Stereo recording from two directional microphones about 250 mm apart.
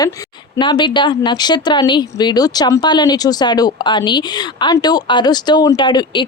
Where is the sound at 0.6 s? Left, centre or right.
Centre.